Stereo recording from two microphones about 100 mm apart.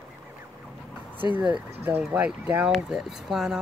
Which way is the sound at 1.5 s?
20° right (ahead or behind).